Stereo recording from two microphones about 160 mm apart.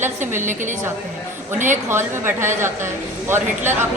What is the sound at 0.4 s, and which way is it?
A woman's voice, 50° right (ahead or behind).